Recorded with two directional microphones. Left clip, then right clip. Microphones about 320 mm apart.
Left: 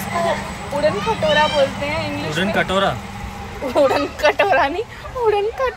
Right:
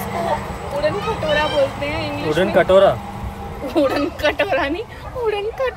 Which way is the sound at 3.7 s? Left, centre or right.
Centre.